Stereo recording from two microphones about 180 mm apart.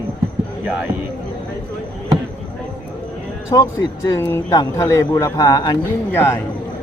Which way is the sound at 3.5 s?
20° left (ahead or behind).